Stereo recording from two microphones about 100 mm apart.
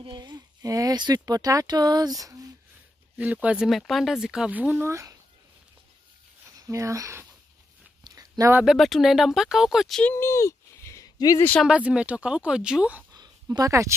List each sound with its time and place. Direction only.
0.0 s speech: 50° right (ahead or behind)
3.2 s speech: 15° right (ahead or behind)
3.6 s speech: centre (ahead or behind); by 5.1 s 30° right (ahead or behind)
6.7 s speech: 30° right (ahead or behind)
8.0 s a sound: 35° right (ahead or behind)
8.6 s speech: centre (ahead or behind)
10.0 s a sound: 25° left (ahead or behind)
11.6 s speech: 10° right (ahead or behind)
13.1 s a sound: 40° right (ahead or behind)